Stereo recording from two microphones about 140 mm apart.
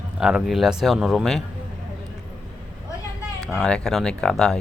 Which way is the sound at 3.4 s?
Centre (ahead or behind).